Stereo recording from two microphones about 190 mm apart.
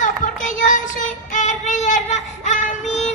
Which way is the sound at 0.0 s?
40° left (ahead or behind).